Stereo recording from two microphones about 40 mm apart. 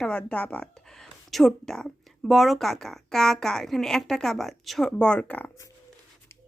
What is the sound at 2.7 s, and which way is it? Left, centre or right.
A woman's voice, centre.